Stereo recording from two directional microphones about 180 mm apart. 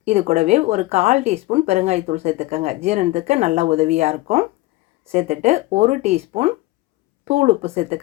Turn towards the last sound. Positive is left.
turn(degrees=-35)  # may be behind; listen again after turning